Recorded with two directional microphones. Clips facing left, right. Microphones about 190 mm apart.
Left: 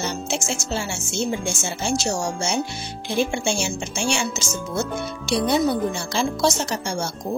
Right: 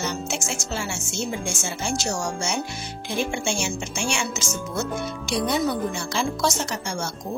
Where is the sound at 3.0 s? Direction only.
30° left (ahead or behind).